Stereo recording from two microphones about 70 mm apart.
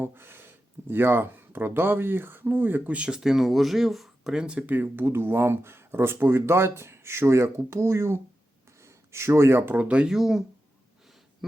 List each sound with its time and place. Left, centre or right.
0.0 s speech: right; by 4.3 s centre
4.3 s speech: centre
4.6 s speech: right
9.7 s speech: centre
10.1 s speech: centre